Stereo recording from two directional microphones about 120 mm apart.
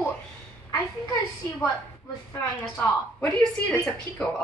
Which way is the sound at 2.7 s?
10° left (ahead or behind).